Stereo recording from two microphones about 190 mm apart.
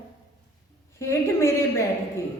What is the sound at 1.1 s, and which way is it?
Speech, 15° left (ahead or behind).